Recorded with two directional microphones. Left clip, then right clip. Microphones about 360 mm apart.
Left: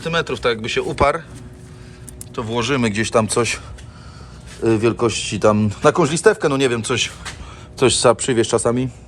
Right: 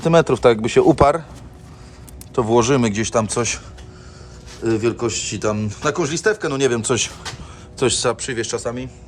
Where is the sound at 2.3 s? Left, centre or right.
Centre.